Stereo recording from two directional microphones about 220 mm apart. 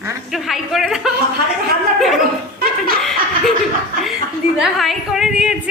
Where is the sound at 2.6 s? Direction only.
40° right (ahead or behind).